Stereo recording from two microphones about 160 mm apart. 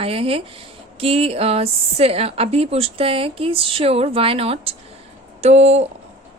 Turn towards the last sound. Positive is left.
turn(degrees=-45)  # may be behind; listen again after turning